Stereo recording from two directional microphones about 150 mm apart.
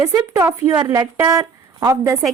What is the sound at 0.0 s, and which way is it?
A woman's voice, 20° right (ahead or behind).